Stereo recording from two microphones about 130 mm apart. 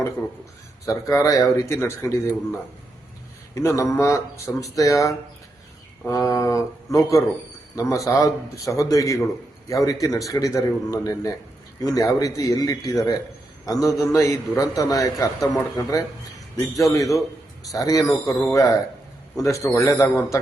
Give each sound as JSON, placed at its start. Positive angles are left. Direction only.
{"t": 0.9, "sound": "a man's voice", "side_deg": 25}